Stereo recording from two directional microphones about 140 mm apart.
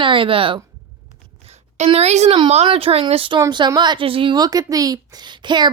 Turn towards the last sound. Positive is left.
turn(degrees=-35)  # may be behind; listen again after turning